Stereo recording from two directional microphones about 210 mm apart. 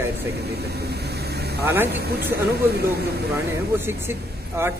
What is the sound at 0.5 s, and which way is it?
Speech, 50° right (ahead or behind).